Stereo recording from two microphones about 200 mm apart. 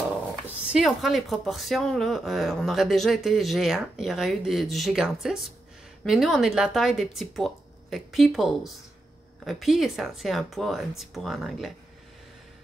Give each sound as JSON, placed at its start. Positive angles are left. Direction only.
{"t": 0.7, "sound": "speech", "side_deg": 0}